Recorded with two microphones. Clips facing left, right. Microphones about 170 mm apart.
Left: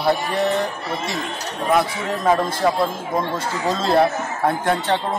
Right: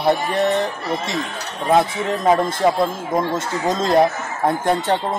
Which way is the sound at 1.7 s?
25° right (ahead or behind).